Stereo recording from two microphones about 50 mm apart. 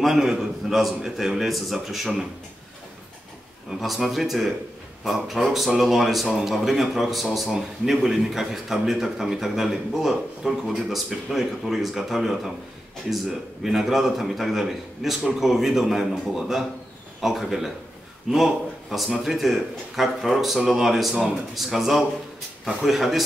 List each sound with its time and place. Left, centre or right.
0.0 s speech: centre
3.8 s a man's voice: centre
13.7 s speech: centre